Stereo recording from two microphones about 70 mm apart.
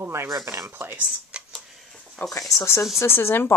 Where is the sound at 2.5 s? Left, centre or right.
Left.